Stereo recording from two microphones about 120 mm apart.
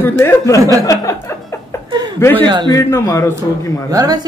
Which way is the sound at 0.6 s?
30° right (ahead or behind).